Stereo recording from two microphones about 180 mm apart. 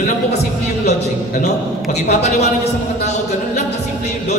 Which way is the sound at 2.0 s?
40° left (ahead or behind).